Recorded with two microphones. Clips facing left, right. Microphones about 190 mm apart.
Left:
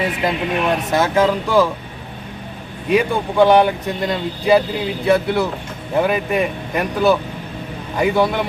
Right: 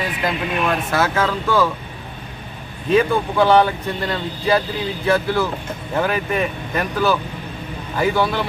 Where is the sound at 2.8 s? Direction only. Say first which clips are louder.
Right 1 dB; 15° left (ahead or behind).